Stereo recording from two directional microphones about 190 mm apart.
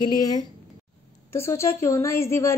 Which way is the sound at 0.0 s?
20° left (ahead or behind).